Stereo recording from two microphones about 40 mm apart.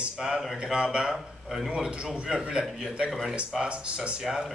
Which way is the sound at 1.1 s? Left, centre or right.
Centre.